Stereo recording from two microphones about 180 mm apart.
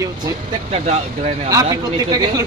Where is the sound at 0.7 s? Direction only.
40° right (ahead or behind).